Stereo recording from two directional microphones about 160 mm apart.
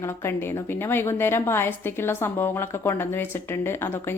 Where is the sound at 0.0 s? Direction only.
15° left (ahead or behind).